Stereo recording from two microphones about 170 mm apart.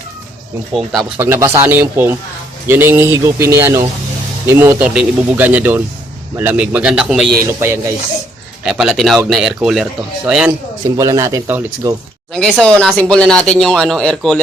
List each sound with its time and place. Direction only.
1.2 s speech: 15° right (ahead or behind)
7.6 s speech: 15° right (ahead or behind)
10.9 s speech: 20° right (ahead or behind)
12.3 s speech: 5° left (ahead or behind)